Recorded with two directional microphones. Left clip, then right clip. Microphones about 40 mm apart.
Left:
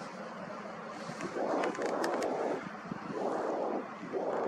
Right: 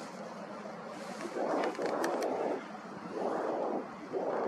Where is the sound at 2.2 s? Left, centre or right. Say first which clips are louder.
Even; centre.